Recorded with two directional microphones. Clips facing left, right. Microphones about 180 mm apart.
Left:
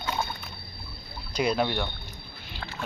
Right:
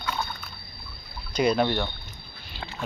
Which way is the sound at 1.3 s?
5° left (ahead or behind).